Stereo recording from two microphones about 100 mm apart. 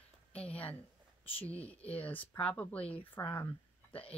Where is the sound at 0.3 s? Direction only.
15° left (ahead or behind).